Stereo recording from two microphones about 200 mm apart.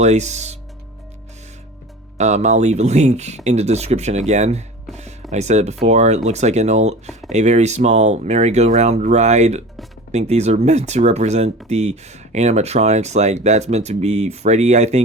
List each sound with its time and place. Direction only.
0.0 s speech: 35° right (ahead or behind)
2.1 s speech: 35° right (ahead or behind)